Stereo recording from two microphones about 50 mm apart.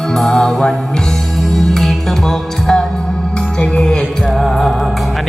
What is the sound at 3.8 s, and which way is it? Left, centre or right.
Music, centre.